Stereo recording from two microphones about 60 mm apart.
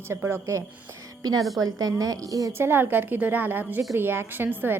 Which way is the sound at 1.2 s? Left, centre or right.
Right.